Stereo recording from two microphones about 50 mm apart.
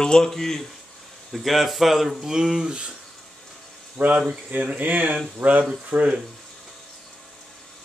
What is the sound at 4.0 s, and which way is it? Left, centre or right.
Speech, right.